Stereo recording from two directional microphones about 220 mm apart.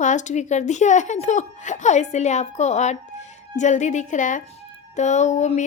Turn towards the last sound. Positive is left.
turn(degrees=35)  # may be behind; listen again after turning